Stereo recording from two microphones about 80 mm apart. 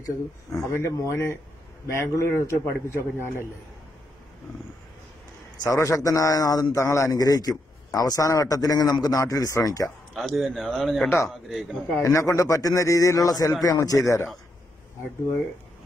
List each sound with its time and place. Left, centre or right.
0.0 s a man's voice: left
5.6 s a man's voice: left
7.1 s a man's voice: left
9.8 s speech: centre
12.0 s a man's voice: left